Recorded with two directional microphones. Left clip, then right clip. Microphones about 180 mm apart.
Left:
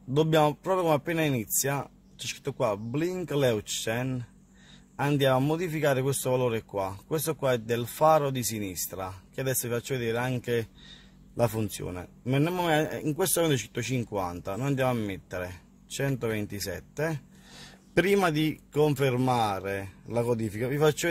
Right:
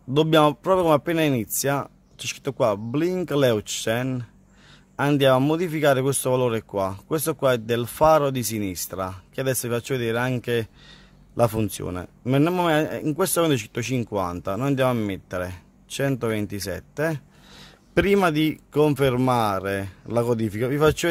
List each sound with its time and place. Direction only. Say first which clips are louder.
0.1 s speech: right 6 dB; 30° right (ahead or behind)